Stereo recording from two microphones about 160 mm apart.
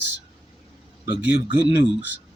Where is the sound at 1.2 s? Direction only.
10° right (ahead or behind).